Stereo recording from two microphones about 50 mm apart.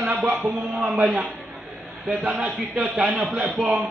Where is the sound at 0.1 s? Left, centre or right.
Right.